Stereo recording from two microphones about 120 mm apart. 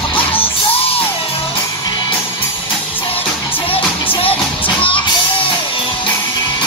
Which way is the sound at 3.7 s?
50° left (ahead or behind).